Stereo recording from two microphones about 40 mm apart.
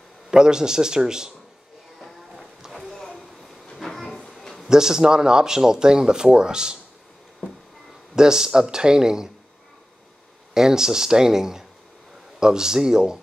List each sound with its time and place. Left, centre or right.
0.3 s a man's voice: centre
2.0 s music: centre
2.7 s a sound: centre
3.7 s train: centre
4.3 s a sound: centre
4.6 s speech: centre
8.2 s a man's voice: centre
10.5 s a man's voice: centre